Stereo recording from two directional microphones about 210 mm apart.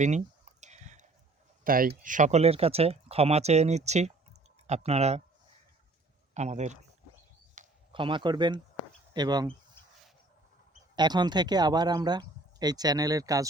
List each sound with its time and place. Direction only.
0.6 s a sound: 35° right (ahead or behind)
1.6 s speech: 45° right (ahead or behind)
6.3 s speech: 35° right (ahead or behind)
7.6 s a sound: 35° right (ahead or behind)
7.9 s speech: 25° right (ahead or behind)
10.9 s speech: 20° right (ahead or behind)